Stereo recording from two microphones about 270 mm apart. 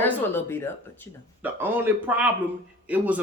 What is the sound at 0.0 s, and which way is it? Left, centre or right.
Speech, centre.